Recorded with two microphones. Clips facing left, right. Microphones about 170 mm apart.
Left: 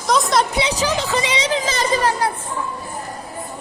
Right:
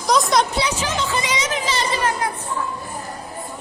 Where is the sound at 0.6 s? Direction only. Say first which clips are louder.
Left 3 dB; 35° left (ahead or behind).